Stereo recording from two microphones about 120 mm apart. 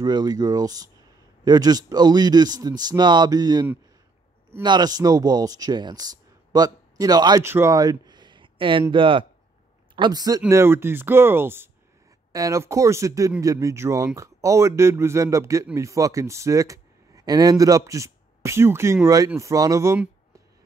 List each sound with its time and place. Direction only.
0.0 s speech: 35° right (ahead or behind)
4.6 s speech: 35° right (ahead or behind)
7.4 s speech: 20° right (ahead or behind)
7.7 s a sound: 30° right (ahead or behind)
8.9 s speech: 45° right (ahead or behind)
10.5 s speech: 20° right (ahead or behind)